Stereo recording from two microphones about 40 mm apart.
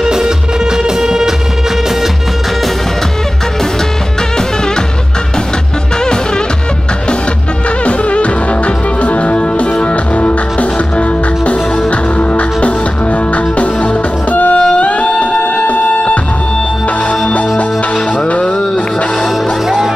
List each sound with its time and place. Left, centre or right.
0.0 s music: centre
7.8 s music: left
14.3 s music: left
18.1 s music: left